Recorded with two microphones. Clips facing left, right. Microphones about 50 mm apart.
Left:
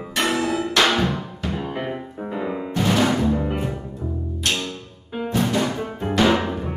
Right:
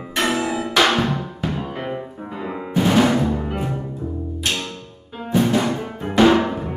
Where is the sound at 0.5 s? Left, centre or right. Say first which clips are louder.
Right 2 dB; centre.